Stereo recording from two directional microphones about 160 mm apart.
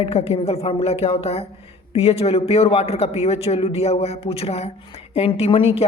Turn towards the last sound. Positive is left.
turn(degrees=35)  # may be behind; listen again after turning